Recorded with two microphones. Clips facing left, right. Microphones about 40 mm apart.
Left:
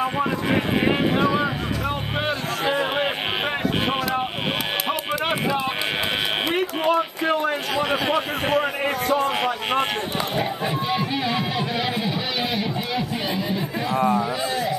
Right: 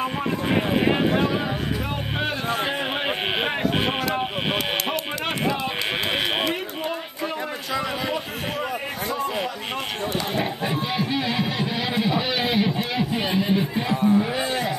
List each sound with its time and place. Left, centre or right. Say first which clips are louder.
6.9 s a sound: left 8 dB; left
10.4 s speech: left 1 dB; centre
13.9 s a man's voice: even; left